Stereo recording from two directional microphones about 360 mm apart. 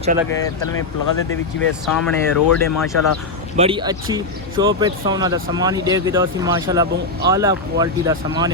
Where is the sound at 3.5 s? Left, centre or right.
Centre.